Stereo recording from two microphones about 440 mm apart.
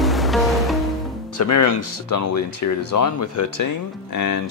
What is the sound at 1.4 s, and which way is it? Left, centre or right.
Speech, left.